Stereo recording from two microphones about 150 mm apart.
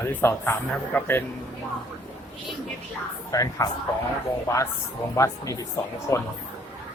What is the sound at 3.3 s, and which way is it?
A man's voice, 25° left (ahead or behind).